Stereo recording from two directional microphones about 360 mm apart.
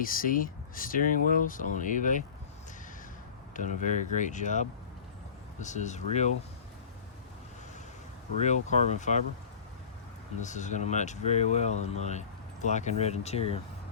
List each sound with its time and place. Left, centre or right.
0.0 s speech: left
3.5 s speech: left
8.4 s speech: centre
10.4 s speech: centre